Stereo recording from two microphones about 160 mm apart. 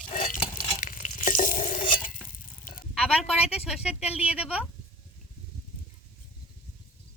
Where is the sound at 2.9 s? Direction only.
Centre (ahead or behind).